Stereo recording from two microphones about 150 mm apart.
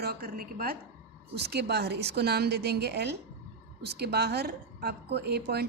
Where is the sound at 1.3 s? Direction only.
90° right.